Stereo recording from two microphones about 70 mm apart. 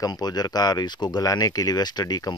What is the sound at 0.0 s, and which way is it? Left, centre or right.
Speech, left.